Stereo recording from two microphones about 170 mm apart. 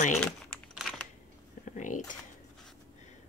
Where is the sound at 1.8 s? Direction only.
50° left (ahead or behind).